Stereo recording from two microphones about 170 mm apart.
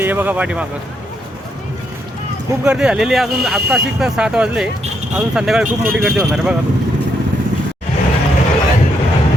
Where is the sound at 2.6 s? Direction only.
5° right (ahead or behind).